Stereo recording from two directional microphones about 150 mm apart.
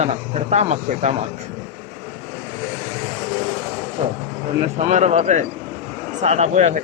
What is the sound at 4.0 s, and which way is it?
Speech, 45° right (ahead or behind).